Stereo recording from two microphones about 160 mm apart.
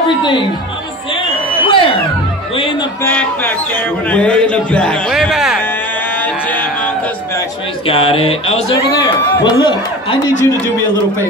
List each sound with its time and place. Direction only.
0.2 s speech: 30° left (ahead or behind)
1.1 s a sound: 35° left (ahead or behind)
2.5 s speech: 35° left (ahead or behind)
3.0 s a man's voice: 10° left (ahead or behind)
6.1 s a sound: 10° left (ahead or behind)
7.8 s speech: 35° left (ahead or behind)
8.9 s speech: 25° left (ahead or behind)